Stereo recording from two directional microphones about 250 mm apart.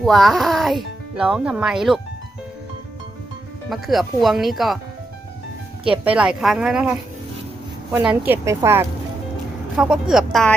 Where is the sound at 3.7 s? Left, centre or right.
Centre.